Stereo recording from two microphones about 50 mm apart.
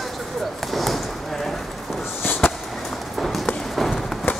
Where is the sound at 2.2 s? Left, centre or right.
Left.